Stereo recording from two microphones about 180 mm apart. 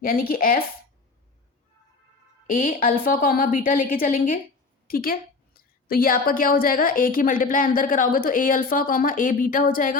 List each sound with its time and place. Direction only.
0.0 s a woman's voice: 55° left (ahead or behind)
2.5 s a woman's voice: 50° left (ahead or behind)